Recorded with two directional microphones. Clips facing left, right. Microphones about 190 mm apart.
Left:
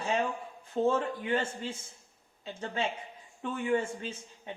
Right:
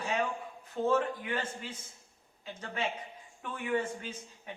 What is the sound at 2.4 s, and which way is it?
Speech, 30° left (ahead or behind).